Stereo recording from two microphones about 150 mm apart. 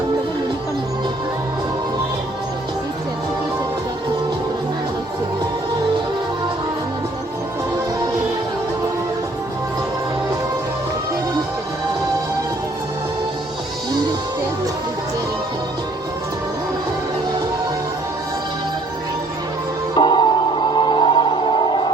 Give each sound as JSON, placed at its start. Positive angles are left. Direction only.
{"t": 20.0, "sound": "music", "side_deg": 30}